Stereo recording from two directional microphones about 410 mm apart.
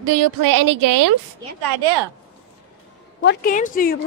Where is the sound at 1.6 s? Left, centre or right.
Right.